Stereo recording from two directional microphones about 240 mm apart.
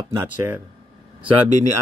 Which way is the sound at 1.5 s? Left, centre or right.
Right.